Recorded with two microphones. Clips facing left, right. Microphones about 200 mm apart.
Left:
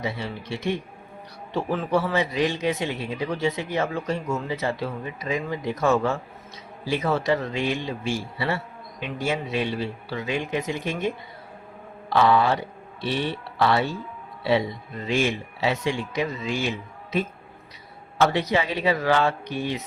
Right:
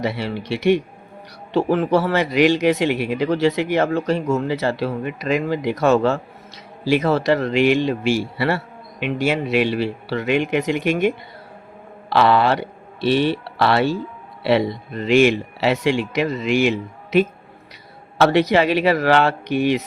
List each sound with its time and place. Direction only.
0.0 s a man's voice: 80° right